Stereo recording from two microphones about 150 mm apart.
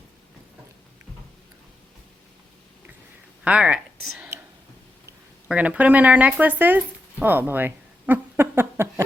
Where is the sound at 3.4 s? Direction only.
5° right (ahead or behind).